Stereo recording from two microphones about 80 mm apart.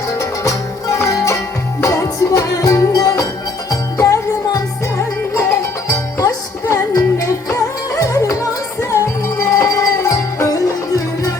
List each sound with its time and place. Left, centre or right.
0.2 s music: left